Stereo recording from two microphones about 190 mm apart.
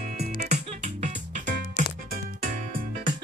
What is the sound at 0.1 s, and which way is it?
Music, 40° right (ahead or behind).